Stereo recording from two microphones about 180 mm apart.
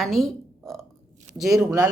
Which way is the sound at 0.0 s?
Centre (ahead or behind).